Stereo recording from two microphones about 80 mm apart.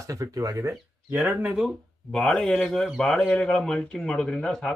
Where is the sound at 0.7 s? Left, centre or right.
Right.